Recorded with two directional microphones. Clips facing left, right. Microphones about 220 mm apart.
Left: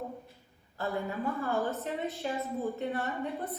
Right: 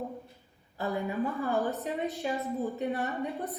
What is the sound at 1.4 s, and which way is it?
Speech, 15° right (ahead or behind).